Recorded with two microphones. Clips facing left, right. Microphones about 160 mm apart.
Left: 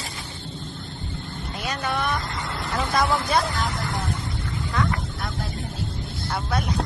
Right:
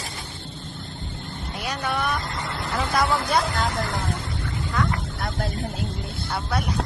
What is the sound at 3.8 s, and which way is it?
Speech, 90° right.